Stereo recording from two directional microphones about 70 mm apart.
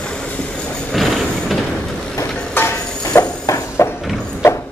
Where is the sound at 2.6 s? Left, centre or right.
Left.